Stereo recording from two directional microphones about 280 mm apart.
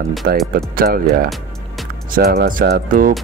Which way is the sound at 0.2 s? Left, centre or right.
Right.